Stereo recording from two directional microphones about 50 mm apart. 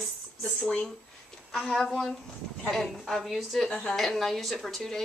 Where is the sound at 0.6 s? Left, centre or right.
Left.